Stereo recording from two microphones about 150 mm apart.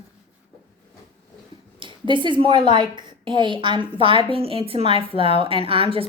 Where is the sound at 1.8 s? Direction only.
30° right (ahead or behind).